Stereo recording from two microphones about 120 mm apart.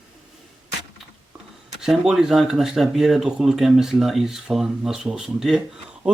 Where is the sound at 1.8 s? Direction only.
5° right (ahead or behind).